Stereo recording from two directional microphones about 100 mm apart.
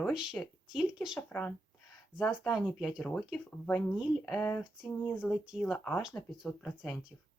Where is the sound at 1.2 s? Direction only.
15° left (ahead or behind).